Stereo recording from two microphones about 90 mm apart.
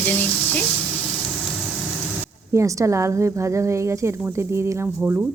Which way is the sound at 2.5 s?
35° right (ahead or behind).